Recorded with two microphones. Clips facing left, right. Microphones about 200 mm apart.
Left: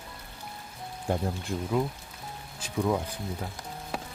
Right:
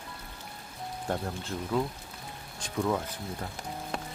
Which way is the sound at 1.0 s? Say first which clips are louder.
Left 4 dB; 10° left (ahead or behind).